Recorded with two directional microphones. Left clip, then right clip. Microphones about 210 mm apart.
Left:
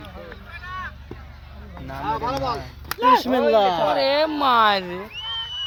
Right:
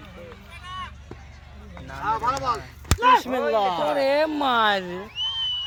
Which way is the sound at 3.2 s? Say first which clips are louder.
Left 5 dB; 45° left (ahead or behind).